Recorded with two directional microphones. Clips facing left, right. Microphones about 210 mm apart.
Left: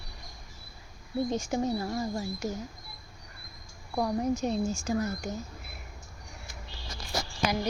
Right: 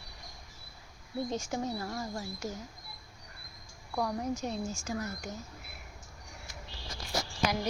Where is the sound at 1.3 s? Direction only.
15° left (ahead or behind).